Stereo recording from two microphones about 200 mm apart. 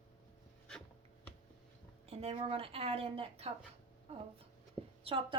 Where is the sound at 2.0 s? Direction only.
30° right (ahead or behind).